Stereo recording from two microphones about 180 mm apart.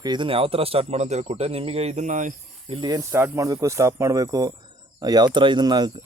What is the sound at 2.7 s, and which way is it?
Speech, 20° right (ahead or behind).